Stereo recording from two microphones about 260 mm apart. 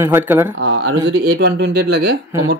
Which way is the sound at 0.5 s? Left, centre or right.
Right.